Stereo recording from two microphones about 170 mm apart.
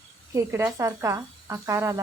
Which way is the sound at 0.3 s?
15° right (ahead or behind).